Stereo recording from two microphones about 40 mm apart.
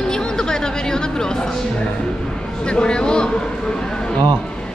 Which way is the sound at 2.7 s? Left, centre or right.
Left.